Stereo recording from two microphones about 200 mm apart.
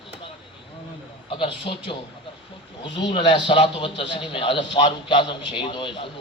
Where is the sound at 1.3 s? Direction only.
25° left (ahead or behind).